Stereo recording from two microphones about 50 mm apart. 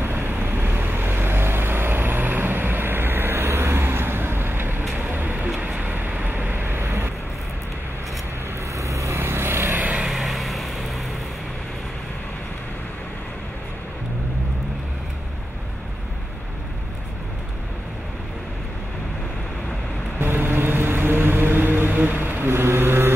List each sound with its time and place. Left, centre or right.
0.0 s vehicle: right
4.9 s vehicle: right
8.7 s vehicle: right
9.2 s vehicle: right
9.8 s vehicle: right
10.0 s vehicle: centre
20.2 s music: right